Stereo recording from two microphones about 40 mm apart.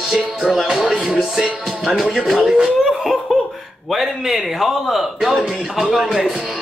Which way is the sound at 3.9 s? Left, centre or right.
Centre.